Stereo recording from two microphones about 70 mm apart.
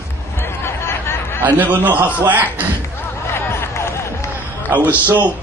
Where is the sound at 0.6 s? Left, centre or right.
Left.